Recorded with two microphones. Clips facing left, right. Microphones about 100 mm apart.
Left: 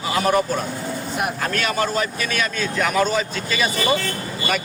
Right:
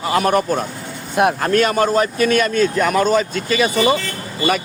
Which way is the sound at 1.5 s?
40° right (ahead or behind).